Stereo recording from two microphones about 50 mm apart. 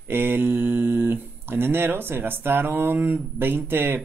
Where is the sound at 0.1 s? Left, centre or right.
Right.